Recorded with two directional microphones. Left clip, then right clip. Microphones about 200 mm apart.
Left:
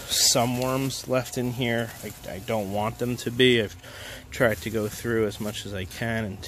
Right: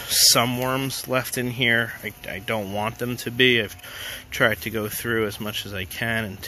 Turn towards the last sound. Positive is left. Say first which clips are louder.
# right 4 dB
turn(degrees=5)  # may be behind; listen again after turning